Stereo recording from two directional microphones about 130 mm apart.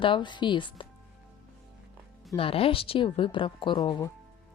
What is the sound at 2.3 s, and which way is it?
Speech, 45° left (ahead or behind).